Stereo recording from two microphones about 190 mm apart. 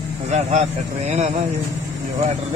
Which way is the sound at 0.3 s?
40° right (ahead or behind).